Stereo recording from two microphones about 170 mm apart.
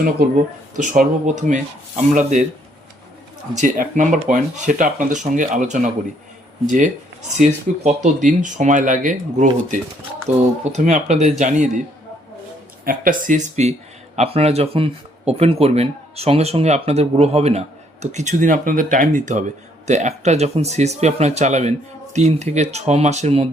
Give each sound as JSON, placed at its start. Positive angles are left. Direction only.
{"t": 0.8, "sound": "speech", "side_deg": -45}
{"t": 3.5, "sound": "speech", "side_deg": -45}
{"t": 12.8, "sound": "speech", "side_deg": -55}